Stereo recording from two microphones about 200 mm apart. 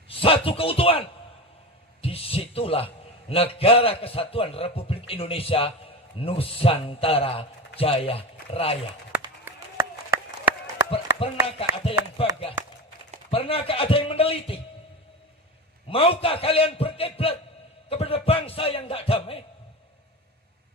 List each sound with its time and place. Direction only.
0.1 s a man's voice: 25° left (ahead or behind)
9.5 s run: 10° right (ahead or behind)
10.9 s a man's voice: 30° left (ahead or behind)
15.9 s a man's voice: 25° left (ahead or behind)